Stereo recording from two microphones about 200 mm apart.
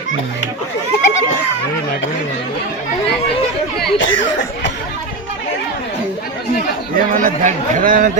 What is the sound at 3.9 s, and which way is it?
Speech, 70° left (ahead or behind).